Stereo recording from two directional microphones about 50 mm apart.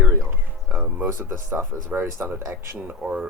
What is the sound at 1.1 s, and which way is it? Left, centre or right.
Speech, right.